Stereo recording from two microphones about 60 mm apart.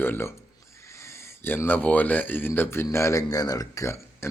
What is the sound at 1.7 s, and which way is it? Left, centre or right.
Speech, left.